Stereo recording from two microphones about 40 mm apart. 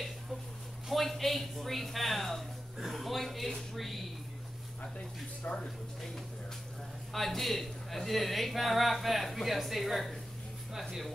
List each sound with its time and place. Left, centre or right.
0.8 s a man's voice: centre
4.9 s speech: left
7.1 s a man's voice: centre